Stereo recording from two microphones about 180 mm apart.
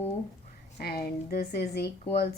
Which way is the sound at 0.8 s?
55° left (ahead or behind).